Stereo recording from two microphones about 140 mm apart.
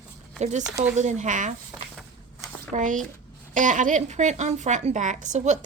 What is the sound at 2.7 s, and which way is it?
A woman's voice, 65° right (ahead or behind).